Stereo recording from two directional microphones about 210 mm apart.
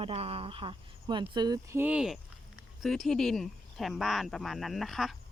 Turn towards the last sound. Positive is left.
turn(degrees=0)  # may be behind; listen again after turning